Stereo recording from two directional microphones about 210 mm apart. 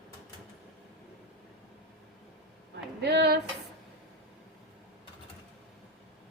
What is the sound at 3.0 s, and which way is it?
Speech, 55° right (ahead or behind).